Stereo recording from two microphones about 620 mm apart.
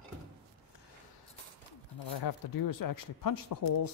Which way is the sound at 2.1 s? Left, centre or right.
Left.